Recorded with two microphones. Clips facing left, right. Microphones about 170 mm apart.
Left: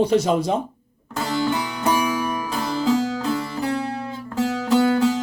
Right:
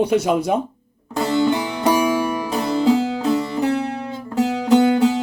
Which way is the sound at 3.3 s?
25° right (ahead or behind).